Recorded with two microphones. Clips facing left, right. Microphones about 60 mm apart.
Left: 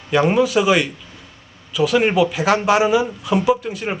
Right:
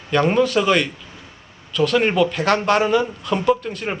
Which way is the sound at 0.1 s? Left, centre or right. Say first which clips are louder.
Left 1 dB; centre.